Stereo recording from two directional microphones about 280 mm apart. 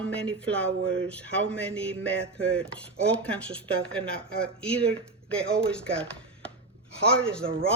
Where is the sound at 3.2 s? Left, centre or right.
Centre.